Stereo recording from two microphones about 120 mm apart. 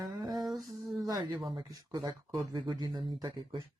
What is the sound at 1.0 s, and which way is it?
Speech, 30° right (ahead or behind).